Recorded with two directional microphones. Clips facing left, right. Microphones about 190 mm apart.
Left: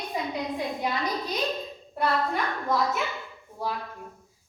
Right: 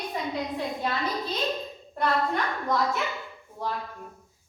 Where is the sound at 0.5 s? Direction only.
15° left (ahead or behind).